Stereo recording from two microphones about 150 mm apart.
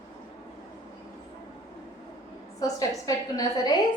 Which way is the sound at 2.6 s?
25° left (ahead or behind).